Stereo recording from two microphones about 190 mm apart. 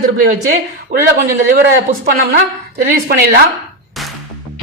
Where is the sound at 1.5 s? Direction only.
55° right (ahead or behind).